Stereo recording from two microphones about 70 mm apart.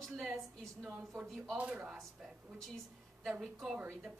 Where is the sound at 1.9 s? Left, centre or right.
Centre.